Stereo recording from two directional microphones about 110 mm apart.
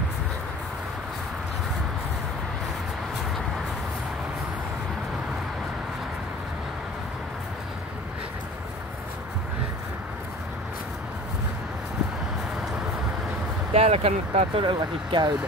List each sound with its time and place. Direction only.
13.7 s speech: 70° right (ahead or behind)
14.6 s speech: 45° right (ahead or behind)